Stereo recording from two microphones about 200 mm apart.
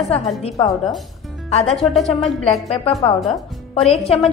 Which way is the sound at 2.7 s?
30° left (ahead or behind).